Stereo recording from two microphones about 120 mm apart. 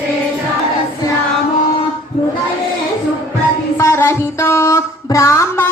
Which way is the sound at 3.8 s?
20° left (ahead or behind).